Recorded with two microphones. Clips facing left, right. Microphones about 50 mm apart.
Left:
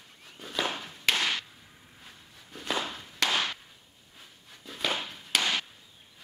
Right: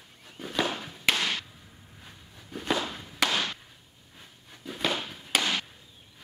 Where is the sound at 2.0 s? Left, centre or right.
Centre.